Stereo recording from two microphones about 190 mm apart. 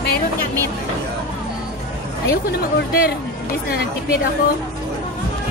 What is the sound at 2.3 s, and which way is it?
Speech, 55° left (ahead or behind).